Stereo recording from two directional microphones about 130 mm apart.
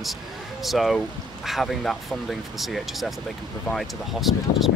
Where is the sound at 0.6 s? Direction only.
Centre (ahead or behind).